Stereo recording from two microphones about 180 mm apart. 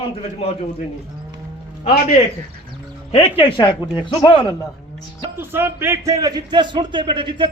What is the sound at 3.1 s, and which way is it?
A man's voice, 35° left (ahead or behind).